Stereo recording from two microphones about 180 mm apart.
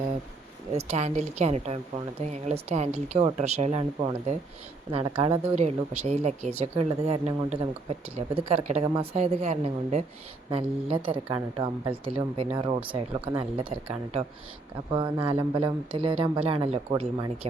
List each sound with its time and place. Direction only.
0.7 s speech: 35° right (ahead or behind)